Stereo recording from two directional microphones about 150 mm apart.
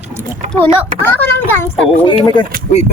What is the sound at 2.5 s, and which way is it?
Speech, 65° right (ahead or behind).